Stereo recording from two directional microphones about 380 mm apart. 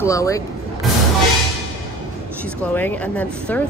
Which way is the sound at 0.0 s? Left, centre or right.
Centre.